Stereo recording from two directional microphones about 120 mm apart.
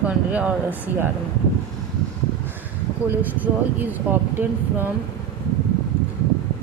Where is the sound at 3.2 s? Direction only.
15° right (ahead or behind).